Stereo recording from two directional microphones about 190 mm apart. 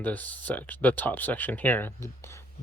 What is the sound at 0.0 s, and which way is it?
Speech, 10° left (ahead or behind).